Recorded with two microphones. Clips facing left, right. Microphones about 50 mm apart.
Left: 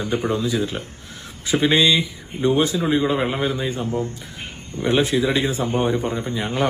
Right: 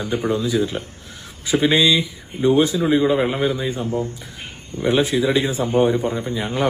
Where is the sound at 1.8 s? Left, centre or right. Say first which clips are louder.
Right 1 dB; left.